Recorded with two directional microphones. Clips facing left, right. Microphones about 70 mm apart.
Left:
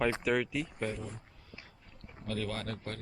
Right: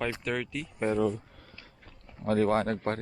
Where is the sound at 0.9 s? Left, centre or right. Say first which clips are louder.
Right 16 dB; right.